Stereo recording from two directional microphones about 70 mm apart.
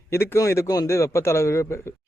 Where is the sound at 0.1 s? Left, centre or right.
Left.